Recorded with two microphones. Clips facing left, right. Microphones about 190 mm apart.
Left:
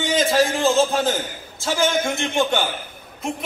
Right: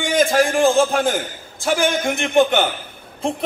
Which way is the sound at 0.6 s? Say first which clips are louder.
Right 6 dB; 15° right (ahead or behind).